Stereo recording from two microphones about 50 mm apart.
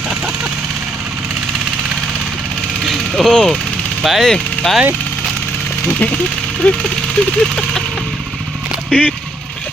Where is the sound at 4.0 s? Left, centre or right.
Centre.